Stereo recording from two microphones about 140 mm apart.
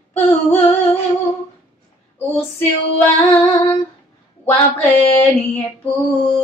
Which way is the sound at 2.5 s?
15° left (ahead or behind).